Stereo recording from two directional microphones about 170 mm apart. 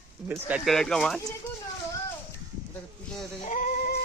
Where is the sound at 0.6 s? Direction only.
Centre (ahead or behind).